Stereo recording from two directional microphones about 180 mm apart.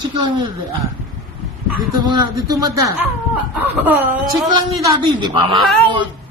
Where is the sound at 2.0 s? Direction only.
25° right (ahead or behind).